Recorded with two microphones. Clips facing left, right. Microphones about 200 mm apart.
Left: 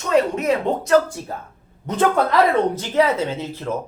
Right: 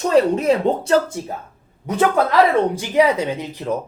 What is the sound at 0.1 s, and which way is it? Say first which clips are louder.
Speech: right 2 dB; 30° right (ahead or behind).